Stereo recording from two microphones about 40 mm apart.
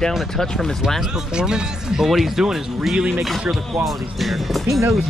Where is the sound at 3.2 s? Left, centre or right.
Centre.